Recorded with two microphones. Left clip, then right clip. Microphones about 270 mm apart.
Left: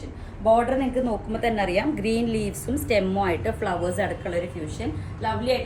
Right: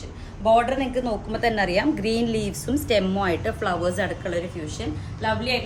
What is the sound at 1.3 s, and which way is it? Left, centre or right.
A woman's voice, right.